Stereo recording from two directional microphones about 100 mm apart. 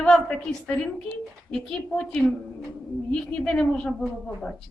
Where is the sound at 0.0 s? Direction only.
10° left (ahead or behind).